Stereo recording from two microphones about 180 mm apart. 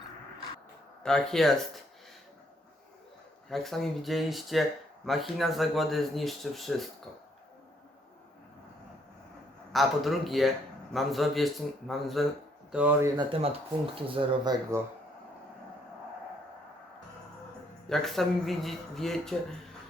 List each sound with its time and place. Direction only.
1.0 s speech: 5° left (ahead or behind)
3.5 s speech: centre (ahead or behind)
9.7 s speech: centre (ahead or behind)
13.1 s speech: 30° right (ahead or behind)
14.7 s speech: 15° right (ahead or behind)
17.8 s speech: centre (ahead or behind)